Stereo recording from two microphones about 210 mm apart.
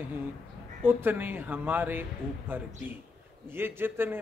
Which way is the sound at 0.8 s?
10° right (ahead or behind).